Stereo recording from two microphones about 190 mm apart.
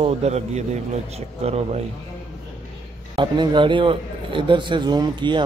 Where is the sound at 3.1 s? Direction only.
25° right (ahead or behind).